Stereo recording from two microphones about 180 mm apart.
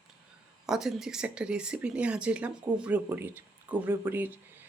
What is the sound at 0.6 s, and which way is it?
Speech, centre (ahead or behind).